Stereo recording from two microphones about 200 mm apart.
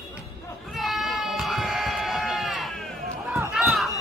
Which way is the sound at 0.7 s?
Centre (ahead or behind).